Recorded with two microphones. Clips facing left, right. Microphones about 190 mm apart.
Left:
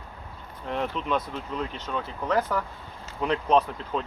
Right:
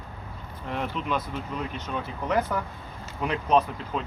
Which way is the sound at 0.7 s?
5° right (ahead or behind).